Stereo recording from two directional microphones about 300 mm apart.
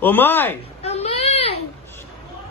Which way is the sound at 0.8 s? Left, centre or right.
Centre.